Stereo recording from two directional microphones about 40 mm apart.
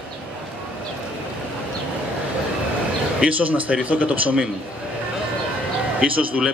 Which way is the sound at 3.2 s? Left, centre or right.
Right.